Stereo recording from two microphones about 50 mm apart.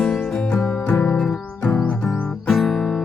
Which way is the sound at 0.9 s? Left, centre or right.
Left.